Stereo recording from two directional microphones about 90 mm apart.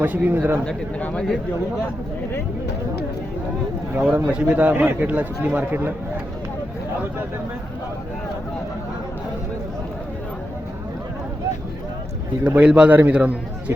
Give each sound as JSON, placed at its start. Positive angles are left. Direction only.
{"t": 0.0, "sound": "speech", "side_deg": -20}
{"t": 0.6, "sound": "speech", "side_deg": 10}
{"t": 3.9, "sound": "a man's voice", "side_deg": -20}
{"t": 12.5, "sound": "a man's voice", "side_deg": -10}